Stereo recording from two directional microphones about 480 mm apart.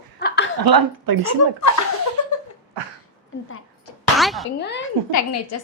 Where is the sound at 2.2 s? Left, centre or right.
Left.